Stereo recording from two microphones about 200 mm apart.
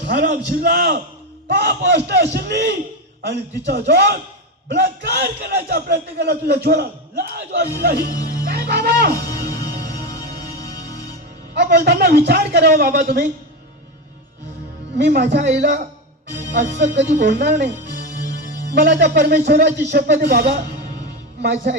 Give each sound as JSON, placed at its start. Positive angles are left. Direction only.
{"t": 0.0, "sound": "a man's voice", "side_deg": -50}
{"t": 8.5, "sound": "music", "side_deg": -50}
{"t": 11.5, "sound": "a man's voice", "side_deg": -55}
{"t": 14.9, "sound": "a man's voice", "side_deg": -60}